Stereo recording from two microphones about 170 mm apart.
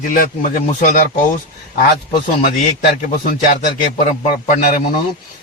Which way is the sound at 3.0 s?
55° left (ahead or behind).